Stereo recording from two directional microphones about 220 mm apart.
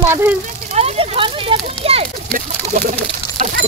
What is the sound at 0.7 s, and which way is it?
A child's voice, 25° right (ahead or behind).